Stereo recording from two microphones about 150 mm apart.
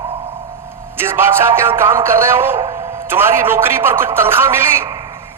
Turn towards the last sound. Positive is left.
turn(degrees=-15)  # may be behind; listen again after turning